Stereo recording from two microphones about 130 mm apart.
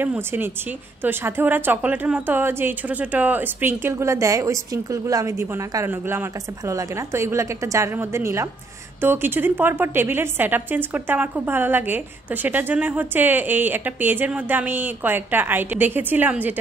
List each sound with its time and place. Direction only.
0.0 s a woman's voice: 15° right (ahead or behind)